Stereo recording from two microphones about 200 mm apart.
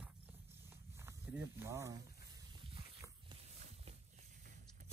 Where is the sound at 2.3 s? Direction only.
25° right (ahead or behind).